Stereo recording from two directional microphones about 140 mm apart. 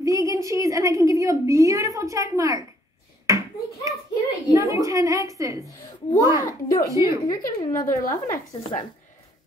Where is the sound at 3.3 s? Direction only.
20° right (ahead or behind).